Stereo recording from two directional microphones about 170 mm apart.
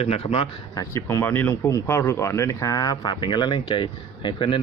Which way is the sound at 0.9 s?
15° left (ahead or behind).